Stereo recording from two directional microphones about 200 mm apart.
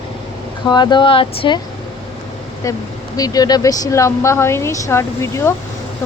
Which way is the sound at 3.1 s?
20° left (ahead or behind).